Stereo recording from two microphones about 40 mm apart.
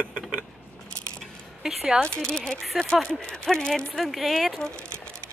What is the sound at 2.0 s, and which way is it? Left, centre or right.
Speech, centre.